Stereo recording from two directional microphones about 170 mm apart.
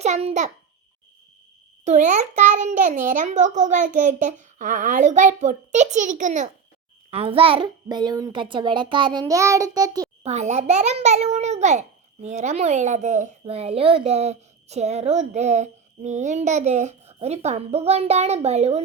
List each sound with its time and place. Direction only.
0.0 s a child's voice: 40° right (ahead or behind)
1.8 s a child's voice: 45° right (ahead or behind)
7.1 s a child's voice: 35° right (ahead or behind)
10.2 s speech: 40° right (ahead or behind)